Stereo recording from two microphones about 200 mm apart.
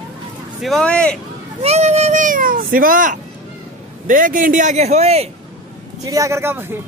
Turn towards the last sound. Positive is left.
turn(degrees=-10)  # may be behind; listen again after turning